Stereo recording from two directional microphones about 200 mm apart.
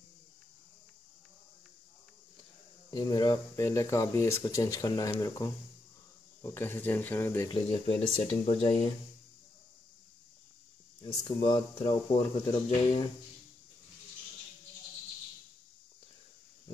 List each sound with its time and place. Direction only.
2.9 s speech: 20° left (ahead or behind)
7.8 s speech: 25° left (ahead or behind)
11.0 s speech: 25° left (ahead or behind)